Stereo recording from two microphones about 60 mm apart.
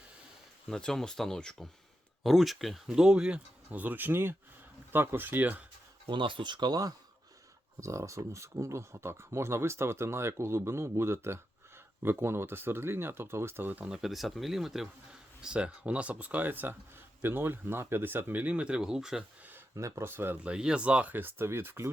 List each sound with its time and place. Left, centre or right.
0.7 s speech: centre
2.2 s speech: centre
3.7 s speech: right
7.8 s speech: right
13.8 s speech: centre
19.7 s speech: right
20.1 s speech: right
20.4 s speech: centre; by 21.8 s right